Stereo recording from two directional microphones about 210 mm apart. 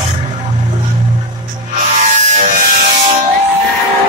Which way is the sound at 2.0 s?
35° right (ahead or behind).